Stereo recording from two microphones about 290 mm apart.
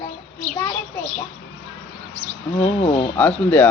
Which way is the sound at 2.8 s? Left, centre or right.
Centre.